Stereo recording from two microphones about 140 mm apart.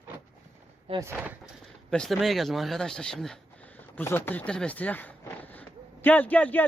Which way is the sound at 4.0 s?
15° left (ahead or behind).